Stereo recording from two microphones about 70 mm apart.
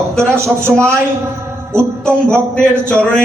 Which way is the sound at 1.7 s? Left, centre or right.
Right.